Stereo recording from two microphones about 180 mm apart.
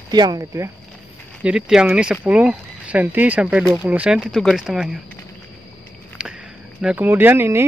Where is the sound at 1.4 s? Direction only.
5° right (ahead or behind).